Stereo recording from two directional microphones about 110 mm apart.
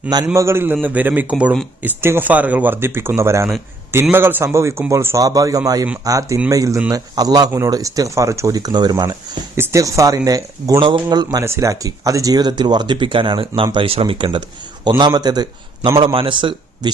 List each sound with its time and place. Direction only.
0.3 s a man's voice: 25° right (ahead or behind)
9.6 s speech: 30° right (ahead or behind)
10.8 s a man's voice: 50° right (ahead or behind)
11.3 s a man's voice: 25° right (ahead or behind)
16.0 s a man's voice: 50° right (ahead or behind)